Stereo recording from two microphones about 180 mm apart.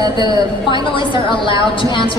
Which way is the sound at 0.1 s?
25° left (ahead or behind).